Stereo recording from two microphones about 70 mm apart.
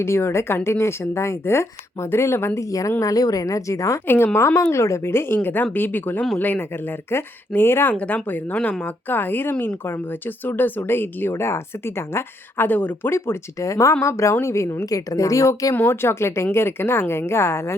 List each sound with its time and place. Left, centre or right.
0.0 s speech: left
2.6 s a woman's voice: left
4.0 s speech: left
7.9 s speech: centre
13.1 s a woman's voice: left
15.7 s speech: left